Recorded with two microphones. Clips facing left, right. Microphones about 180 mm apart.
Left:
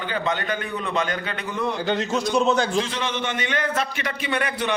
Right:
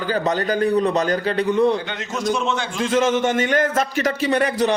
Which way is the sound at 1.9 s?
35° left (ahead or behind).